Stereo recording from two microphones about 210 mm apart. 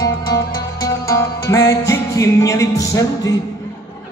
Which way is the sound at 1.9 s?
15° left (ahead or behind).